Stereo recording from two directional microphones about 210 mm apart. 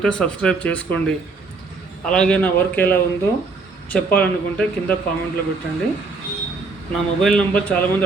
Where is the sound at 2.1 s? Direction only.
5° left (ahead or behind).